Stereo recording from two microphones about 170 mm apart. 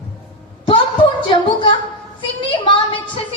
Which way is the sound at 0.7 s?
30° left (ahead or behind).